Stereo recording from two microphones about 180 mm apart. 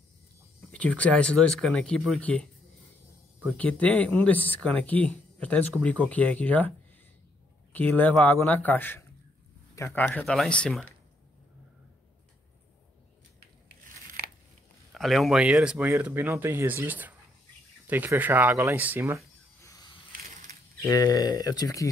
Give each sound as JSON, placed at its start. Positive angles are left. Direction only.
{"t": 0.7, "sound": "speech", "side_deg": 5}
{"t": 3.5, "sound": "speech", "side_deg": 10}
{"t": 7.7, "sound": "speech", "side_deg": 10}
{"t": 13.8, "sound": "crunch", "side_deg": -60}
{"t": 14.9, "sound": "speech", "side_deg": 0}
{"t": 19.6, "sound": "a sound", "side_deg": 20}
{"t": 20.8, "sound": "speech", "side_deg": 20}